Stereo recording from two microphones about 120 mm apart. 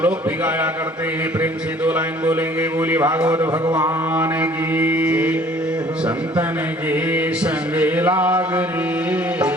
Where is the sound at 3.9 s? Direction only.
15° right (ahead or behind).